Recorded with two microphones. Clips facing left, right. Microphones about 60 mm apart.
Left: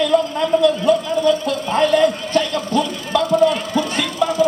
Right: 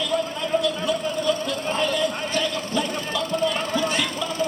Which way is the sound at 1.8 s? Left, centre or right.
Left.